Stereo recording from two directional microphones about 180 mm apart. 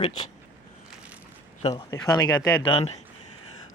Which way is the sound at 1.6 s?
25° left (ahead or behind).